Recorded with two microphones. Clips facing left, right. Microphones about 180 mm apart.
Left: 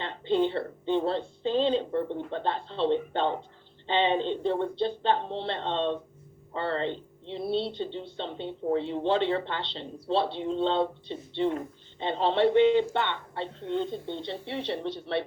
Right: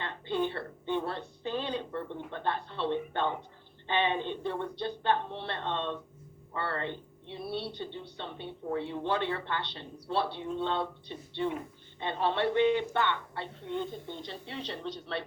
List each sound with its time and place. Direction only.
0.0 s speech: 25° left (ahead or behind)